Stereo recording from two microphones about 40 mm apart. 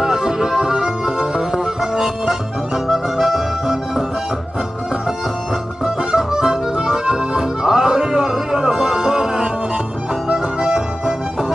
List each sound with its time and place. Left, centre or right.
0.0 s music: centre
6.1 s accordion: centre
10.2 s music: centre